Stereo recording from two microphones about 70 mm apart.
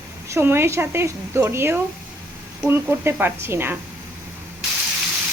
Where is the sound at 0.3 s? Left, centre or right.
Right.